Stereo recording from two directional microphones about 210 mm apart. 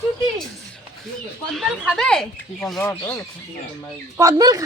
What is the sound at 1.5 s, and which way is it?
Speech, centre (ahead or behind).